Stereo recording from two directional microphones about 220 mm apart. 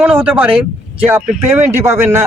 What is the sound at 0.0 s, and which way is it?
Speech, 5° right (ahead or behind).